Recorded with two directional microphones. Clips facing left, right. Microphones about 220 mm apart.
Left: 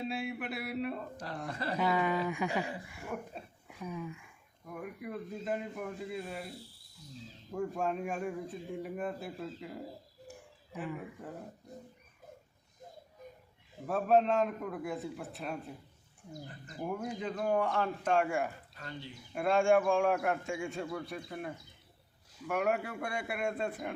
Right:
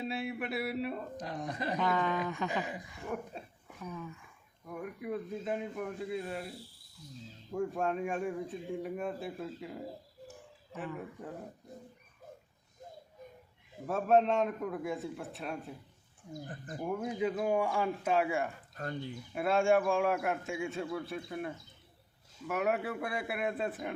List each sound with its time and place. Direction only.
0.0 s speech: centre (ahead or behind)
1.3 s a man's voice: 15° right (ahead or behind)
1.8 s speech: 10° left (ahead or behind)
3.1 s a man's voice: centre (ahead or behind)
3.8 s speech: 15° left (ahead or behind)
4.6 s a man's voice: centre (ahead or behind)
7.5 s a man's voice: centre (ahead or behind)
10.8 s a man's voice: 5° left (ahead or behind)
13.8 s a man's voice: centre (ahead or behind)
16.5 s speech: 50° right (ahead or behind)
16.8 s a man's voice: centre (ahead or behind)
18.7 s speech: 50° right (ahead or behind)
19.3 s a man's voice: centre (ahead or behind)